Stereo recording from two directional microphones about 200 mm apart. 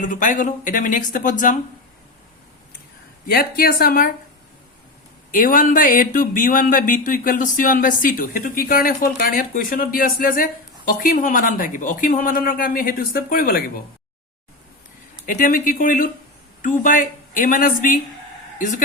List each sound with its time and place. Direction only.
0.0 s speech: 40° left (ahead or behind)
3.2 s speech: 50° left (ahead or behind)
5.3 s speech: 45° left (ahead or behind)
15.3 s speech: 40° left (ahead or behind)